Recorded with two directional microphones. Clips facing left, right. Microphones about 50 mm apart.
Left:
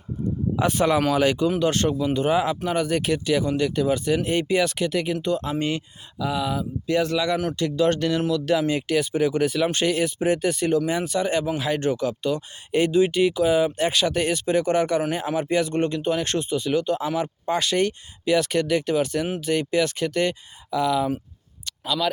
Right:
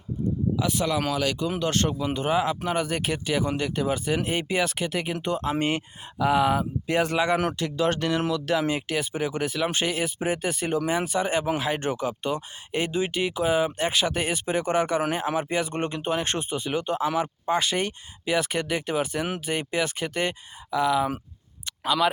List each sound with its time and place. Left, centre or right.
0.5 s speech: left
1.1 s speech: left
1.5 s speech: centre
5.1 s speech: right
5.5 s speech: right
7.5 s speech: centre
7.9 s speech: centre
12.7 s speech: centre